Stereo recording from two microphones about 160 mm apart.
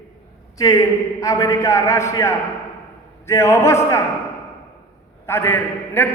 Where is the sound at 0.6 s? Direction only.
20° left (ahead or behind).